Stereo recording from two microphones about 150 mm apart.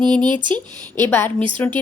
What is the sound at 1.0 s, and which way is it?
Speech, 15° left (ahead or behind).